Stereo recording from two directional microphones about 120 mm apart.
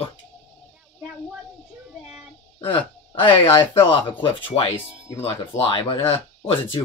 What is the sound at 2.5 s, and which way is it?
Speech, 45° left (ahead or behind).